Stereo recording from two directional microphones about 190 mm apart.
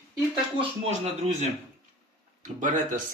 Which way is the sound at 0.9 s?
35° right (ahead or behind).